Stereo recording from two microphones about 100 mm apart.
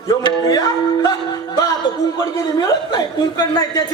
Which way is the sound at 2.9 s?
40° left (ahead or behind).